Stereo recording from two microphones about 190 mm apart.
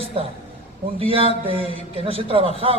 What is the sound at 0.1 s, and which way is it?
A man's voice, 30° right (ahead or behind).